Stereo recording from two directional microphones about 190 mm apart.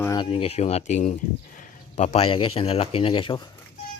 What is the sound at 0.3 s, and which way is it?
Speech, 30° left (ahead or behind).